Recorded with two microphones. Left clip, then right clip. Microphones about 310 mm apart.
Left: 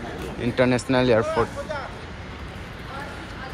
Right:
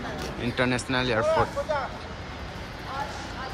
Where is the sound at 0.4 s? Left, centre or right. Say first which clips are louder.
Left 6 dB; centre.